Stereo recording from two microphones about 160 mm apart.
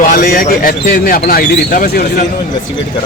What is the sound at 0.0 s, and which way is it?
Speech, 60° left (ahead or behind).